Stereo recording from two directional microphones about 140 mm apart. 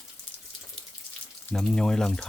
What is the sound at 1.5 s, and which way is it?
Speech, 5° left (ahead or behind).